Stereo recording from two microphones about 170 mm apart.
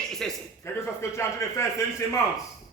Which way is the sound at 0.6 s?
15° left (ahead or behind).